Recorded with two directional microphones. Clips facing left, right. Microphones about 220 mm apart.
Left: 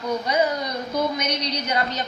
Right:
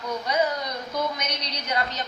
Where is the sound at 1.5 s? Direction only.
Centre (ahead or behind).